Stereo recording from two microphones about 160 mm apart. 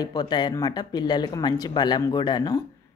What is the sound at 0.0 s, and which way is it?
Speech, 25° left (ahead or behind).